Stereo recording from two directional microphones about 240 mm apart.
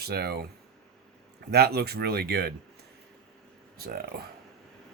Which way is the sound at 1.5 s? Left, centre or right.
Right.